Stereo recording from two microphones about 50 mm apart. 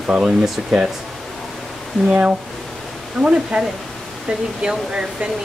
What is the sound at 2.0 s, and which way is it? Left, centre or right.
A man's voice, right.